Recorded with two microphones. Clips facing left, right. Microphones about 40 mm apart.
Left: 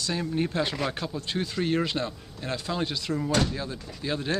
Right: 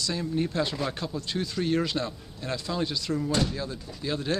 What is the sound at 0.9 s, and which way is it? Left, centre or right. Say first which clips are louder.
Speech: left 1 dB; centre.